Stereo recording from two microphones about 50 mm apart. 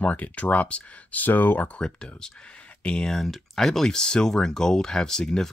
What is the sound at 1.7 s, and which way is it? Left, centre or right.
Speech, centre.